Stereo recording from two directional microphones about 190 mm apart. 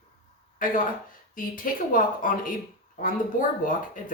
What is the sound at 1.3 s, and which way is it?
A woman's voice, 45° left (ahead or behind).